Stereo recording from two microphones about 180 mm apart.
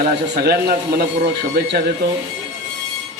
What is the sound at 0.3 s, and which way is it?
Speech, 60° right (ahead or behind).